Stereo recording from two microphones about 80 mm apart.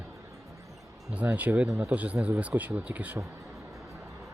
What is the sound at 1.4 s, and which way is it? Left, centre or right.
Speech, centre.